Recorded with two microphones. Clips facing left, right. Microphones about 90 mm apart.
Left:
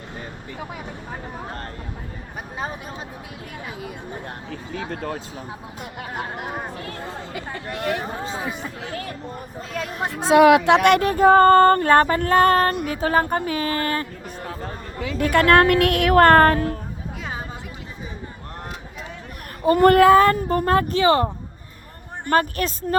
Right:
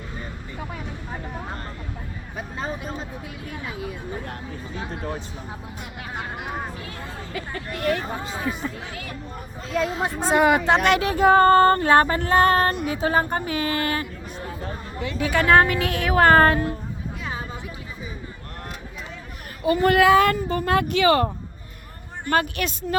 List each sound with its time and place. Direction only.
6.7 s female singing: 50° left (ahead or behind)
7.5 s speech: 20° left (ahead or behind)
8.9 s speech: 40° left (ahead or behind)
10.2 s speech: 90° left
10.7 s female singing: 65° left (ahead or behind); by 12.7 s 45° left (ahead or behind)
13.0 s speech: 45° left (ahead or behind)
15.2 s a woman's voice: 55° left (ahead or behind)
19.6 s speech: 50° left (ahead or behind); by 21.2 s 30° left (ahead or behind)
22.3 s speech: 40° left (ahead or behind)